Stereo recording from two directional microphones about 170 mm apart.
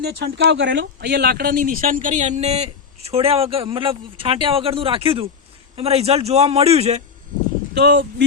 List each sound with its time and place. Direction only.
0.0 s speech: 80° right; by 7.0 s 40° right (ahead or behind)
7.7 s speech: 65° right (ahead or behind)